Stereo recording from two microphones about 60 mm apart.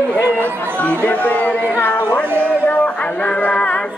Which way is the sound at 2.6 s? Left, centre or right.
Left.